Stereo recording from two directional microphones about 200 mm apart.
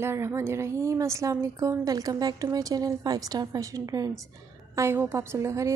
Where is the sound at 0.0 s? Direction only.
15° right (ahead or behind).